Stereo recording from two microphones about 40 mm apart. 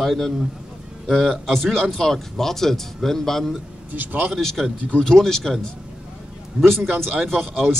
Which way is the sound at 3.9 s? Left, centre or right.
Right.